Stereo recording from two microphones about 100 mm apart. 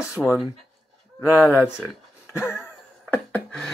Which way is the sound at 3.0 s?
15° left (ahead or behind).